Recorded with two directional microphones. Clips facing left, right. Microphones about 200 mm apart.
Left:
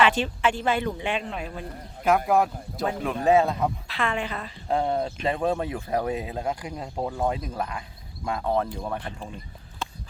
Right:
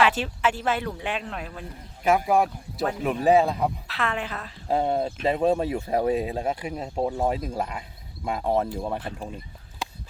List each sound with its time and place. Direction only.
0.0 s speech: 5° right (ahead or behind)
5.4 s speech: 20° right (ahead or behind)
6.5 s speech: 10° right (ahead or behind)
6.8 s speech: 20° right (ahead or behind)
8.2 s speech: 10° right (ahead or behind)
8.4 s speech: 25° right (ahead or behind)
9.0 s speech: 5° right (ahead or behind)